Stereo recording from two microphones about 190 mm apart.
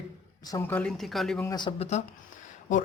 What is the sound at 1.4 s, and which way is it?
Speech, 25° left (ahead or behind).